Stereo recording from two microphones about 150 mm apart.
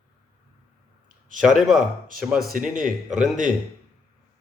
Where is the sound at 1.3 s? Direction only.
Centre (ahead or behind).